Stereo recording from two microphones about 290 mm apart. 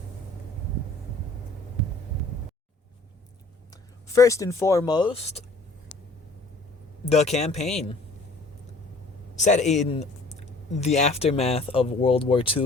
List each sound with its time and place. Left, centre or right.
4.1 s a woman's voice: centre
7.1 s speech: left
9.3 s speech: left